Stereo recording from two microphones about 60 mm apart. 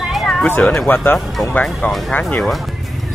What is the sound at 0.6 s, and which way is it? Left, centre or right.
Speech, centre.